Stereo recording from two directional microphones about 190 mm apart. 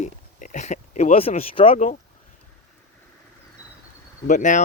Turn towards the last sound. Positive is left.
turn(degrees=40)  # may be behind; listen again after turning